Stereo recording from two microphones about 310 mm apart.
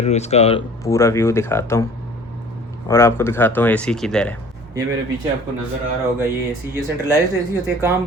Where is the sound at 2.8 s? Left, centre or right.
Centre.